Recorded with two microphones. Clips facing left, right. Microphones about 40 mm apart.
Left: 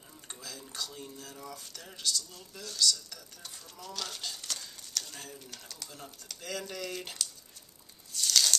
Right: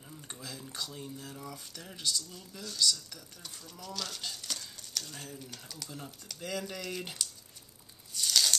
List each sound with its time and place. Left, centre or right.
0.3 s speech: centre
3.8 s speech: centre
8.1 s a sound: centre